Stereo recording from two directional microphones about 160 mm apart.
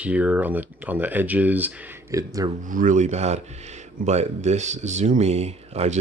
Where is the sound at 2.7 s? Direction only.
55° right (ahead or behind).